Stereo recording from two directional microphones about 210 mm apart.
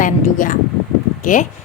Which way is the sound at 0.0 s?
40° left (ahead or behind).